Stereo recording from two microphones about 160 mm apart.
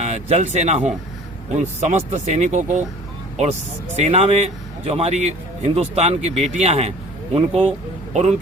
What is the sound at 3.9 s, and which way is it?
Speech, 40° right (ahead or behind).